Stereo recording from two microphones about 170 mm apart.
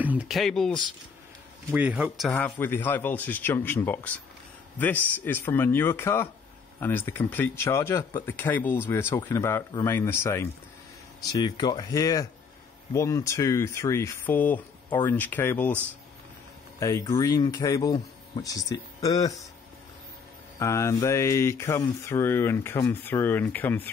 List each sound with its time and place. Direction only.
0.0 s speech: 10° right (ahead or behind)
1.7 s a man's voice: 10° right (ahead or behind)
2.2 s a man's voice: 5° left (ahead or behind)
16.8 s speech: 20° left (ahead or behind)
20.5 s speech: 15° left (ahead or behind)